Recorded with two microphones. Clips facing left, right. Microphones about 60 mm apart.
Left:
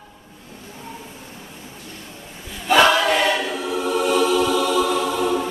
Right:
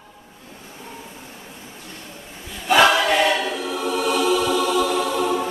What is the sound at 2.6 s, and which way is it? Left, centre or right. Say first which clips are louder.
Choir: even; centre.